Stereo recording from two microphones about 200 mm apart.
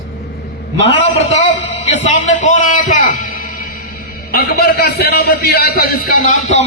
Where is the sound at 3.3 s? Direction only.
45° left (ahead or behind).